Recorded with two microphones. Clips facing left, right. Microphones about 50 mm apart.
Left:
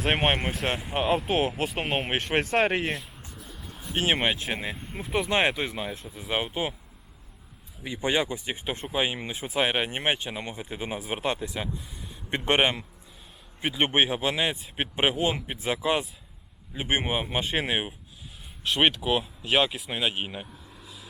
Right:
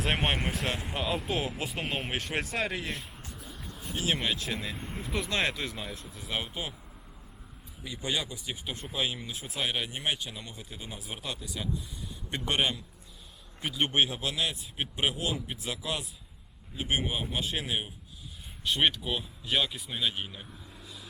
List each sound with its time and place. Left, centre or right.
0.0 s speech: left
0.3 s speech: centre
0.9 s speech: left
3.0 s a sound: centre
3.9 s speech: left
4.9 s speech: left
7.9 s speech: left
20.7 s vehicle: centre